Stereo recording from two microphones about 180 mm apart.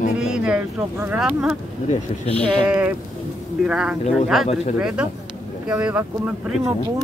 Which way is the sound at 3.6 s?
5° right (ahead or behind).